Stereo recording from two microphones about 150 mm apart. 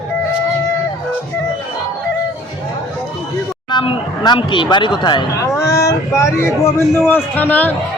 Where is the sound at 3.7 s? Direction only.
30° left (ahead or behind); by 7.7 s 10° left (ahead or behind).